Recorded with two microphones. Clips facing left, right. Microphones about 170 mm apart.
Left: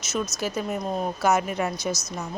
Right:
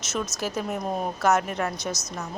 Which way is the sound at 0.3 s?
Centre (ahead or behind).